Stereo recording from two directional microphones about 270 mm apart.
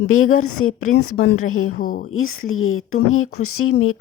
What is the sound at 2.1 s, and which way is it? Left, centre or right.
Speech, left.